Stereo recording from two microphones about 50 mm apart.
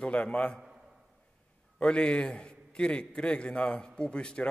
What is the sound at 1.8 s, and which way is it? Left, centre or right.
A man's voice, left.